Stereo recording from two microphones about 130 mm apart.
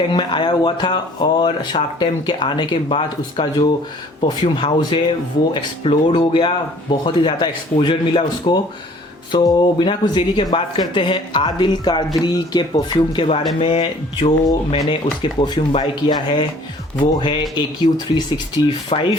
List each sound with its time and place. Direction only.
0.1 s speech: 35° left (ahead or behind)